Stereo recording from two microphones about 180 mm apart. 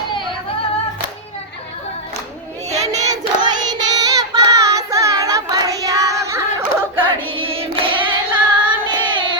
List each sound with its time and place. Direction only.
3.1 s child singing: 20° right (ahead or behind)
6.6 s a sound: 10° right (ahead or behind)
7.0 s carnatic music: 30° right (ahead or behind)
8.3 s singing: 25° right (ahead or behind)